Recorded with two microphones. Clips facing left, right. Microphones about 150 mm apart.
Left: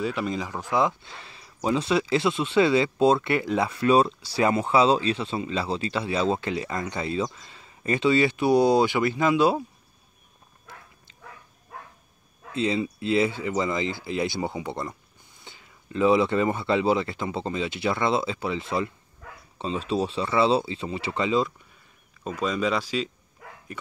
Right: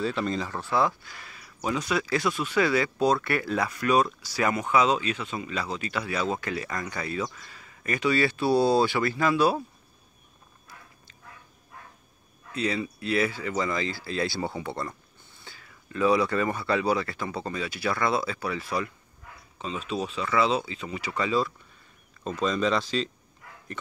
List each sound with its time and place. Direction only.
0.0 s speech: 10° left (ahead or behind)
12.5 s speech: 25° left (ahead or behind)
22.2 s speech: 10° left (ahead or behind)